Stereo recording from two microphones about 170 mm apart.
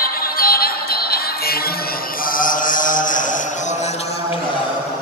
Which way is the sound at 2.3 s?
50° left (ahead or behind).